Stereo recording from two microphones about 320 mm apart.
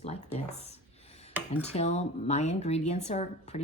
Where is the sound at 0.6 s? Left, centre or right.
Centre.